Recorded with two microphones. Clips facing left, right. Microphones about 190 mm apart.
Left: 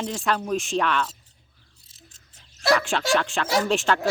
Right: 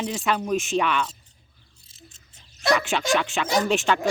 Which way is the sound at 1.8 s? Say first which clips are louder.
Right 5 dB; centre (ahead or behind).